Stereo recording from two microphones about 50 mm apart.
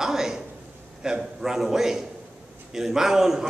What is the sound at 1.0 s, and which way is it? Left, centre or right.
A man's voice, centre.